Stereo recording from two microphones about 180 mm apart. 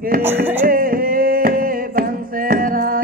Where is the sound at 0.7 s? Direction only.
50° right (ahead or behind).